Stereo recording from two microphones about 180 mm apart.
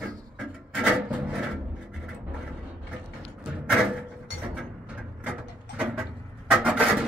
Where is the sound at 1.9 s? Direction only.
5° right (ahead or behind).